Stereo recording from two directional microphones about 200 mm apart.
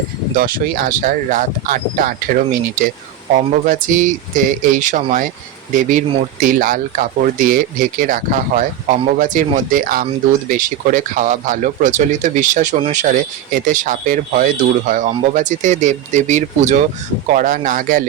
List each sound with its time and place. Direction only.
0.3 s speech: 45° right (ahead or behind)